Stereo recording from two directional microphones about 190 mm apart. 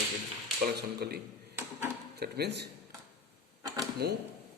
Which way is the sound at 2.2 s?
60° right (ahead or behind).